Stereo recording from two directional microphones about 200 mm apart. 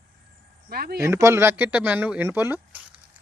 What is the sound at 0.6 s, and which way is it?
Speech, 50° right (ahead or behind).